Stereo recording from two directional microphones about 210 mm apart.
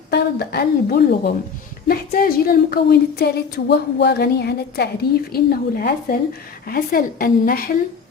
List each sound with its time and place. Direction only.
0.1 s speech: 50° left (ahead or behind)